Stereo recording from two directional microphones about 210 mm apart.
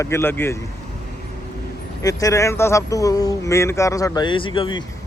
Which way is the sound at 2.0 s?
15° left (ahead or behind).